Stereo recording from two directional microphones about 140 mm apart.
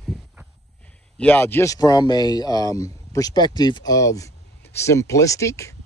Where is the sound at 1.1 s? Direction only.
15° left (ahead or behind).